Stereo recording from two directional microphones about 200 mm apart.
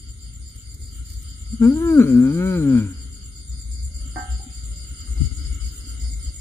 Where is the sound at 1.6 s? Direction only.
10° left (ahead or behind).